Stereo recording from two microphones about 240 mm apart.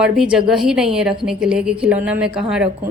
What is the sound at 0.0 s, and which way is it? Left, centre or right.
A woman's voice, centre.